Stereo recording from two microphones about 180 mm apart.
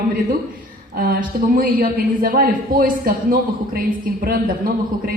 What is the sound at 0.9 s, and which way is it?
A woman's voice, 55° right (ahead or behind).